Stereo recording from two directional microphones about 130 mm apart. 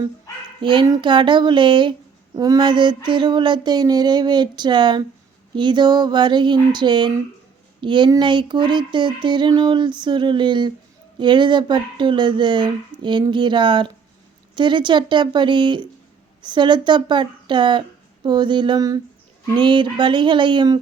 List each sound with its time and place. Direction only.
0.6 s speech: 40° right (ahead or behind)